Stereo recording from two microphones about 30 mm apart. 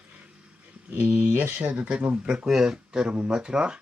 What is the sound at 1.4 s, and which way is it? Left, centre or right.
Speech, right.